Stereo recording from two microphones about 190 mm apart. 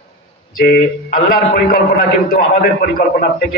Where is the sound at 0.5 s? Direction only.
50° left (ahead or behind).